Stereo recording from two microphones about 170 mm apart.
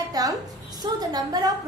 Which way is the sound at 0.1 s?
20° right (ahead or behind).